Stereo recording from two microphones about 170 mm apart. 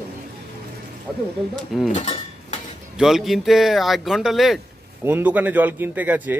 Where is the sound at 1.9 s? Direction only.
40° left (ahead or behind).